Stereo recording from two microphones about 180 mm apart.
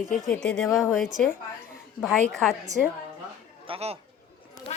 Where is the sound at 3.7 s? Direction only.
35° right (ahead or behind).